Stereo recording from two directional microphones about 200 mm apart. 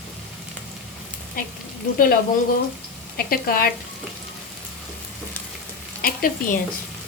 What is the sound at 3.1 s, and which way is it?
Speech, 50° left (ahead or behind).